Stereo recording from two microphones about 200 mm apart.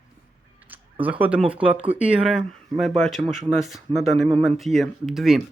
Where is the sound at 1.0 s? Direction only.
5° right (ahead or behind).